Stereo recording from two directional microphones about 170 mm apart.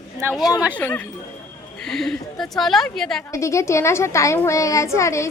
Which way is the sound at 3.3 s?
15° left (ahead or behind).